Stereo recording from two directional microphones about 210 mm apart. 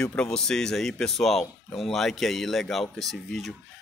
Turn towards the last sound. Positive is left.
turn(degrees=0)  # may be behind; listen again after turning